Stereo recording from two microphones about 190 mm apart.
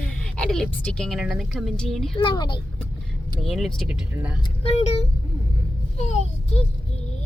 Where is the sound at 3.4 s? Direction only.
Centre (ahead or behind).